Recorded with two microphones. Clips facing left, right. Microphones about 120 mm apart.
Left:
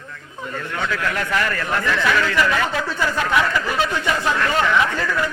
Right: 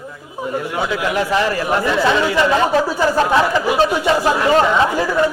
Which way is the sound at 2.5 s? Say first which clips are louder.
Right 7 dB; 30° right (ahead or behind).